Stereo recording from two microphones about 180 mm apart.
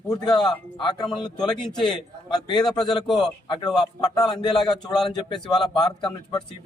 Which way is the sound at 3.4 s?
25° left (ahead or behind).